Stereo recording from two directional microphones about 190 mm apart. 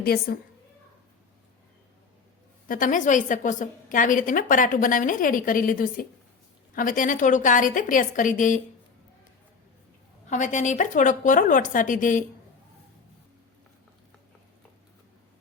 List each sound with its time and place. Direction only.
0.0 s a woman's voice: 55° left (ahead or behind)
2.6 s a woman's voice: 45° left (ahead or behind)
10.2 s a woman's voice: 40° left (ahead or behind)